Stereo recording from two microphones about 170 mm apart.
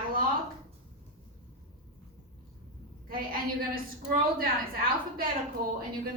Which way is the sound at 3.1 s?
60° right (ahead or behind).